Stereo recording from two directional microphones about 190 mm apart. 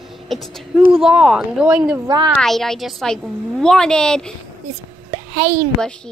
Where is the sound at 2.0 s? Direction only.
20° right (ahead or behind).